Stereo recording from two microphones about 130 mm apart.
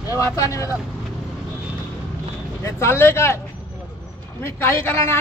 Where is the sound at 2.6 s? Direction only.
20° left (ahead or behind).